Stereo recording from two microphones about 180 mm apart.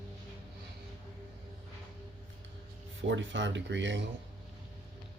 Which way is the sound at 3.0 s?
90° right.